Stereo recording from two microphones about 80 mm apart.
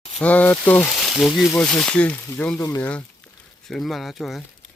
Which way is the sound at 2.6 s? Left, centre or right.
Left.